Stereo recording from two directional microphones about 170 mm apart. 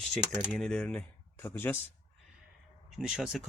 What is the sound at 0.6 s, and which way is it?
Speech, 5° left (ahead or behind).